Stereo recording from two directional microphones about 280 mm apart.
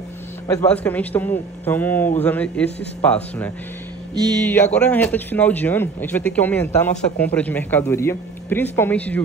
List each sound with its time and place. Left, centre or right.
0.5 s a man's voice: centre
4.7 s speech: centre